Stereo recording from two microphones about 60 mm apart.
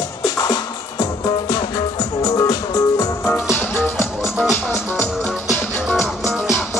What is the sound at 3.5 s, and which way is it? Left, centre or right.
Music, left.